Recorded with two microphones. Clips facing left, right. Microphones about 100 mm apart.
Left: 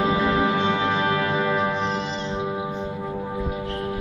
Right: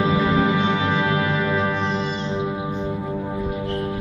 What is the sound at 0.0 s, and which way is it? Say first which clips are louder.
Music: right 1 dB; centre (ahead or behind).